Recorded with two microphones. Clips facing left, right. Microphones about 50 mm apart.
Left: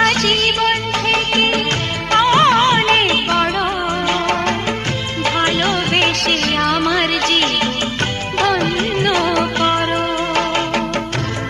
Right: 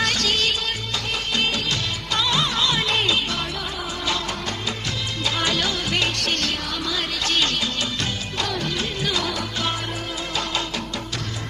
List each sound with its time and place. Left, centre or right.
0.0 s music: left
5.2 s music: left
6.1 s music: left
8.4 s music: left